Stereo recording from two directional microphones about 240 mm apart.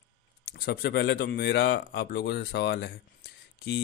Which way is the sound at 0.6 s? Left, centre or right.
Left.